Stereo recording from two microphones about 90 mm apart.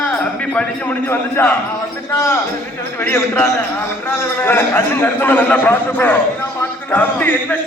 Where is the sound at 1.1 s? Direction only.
25° left (ahead or behind).